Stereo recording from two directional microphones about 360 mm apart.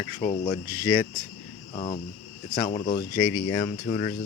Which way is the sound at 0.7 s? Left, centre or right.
Right.